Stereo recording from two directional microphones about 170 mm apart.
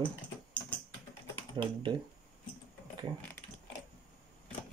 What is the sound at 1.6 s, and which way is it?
Speech, 30° right (ahead or behind).